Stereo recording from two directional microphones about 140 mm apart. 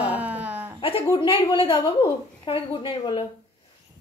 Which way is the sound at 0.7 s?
40° left (ahead or behind).